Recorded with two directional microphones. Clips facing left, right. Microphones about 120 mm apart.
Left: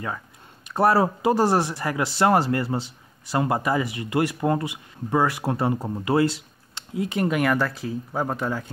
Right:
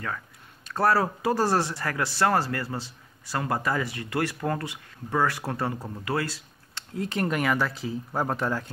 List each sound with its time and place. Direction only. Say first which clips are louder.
0.7 s speech: left 4 dB; 20° left (ahead or behind); by 8.6 s centre (ahead or behind)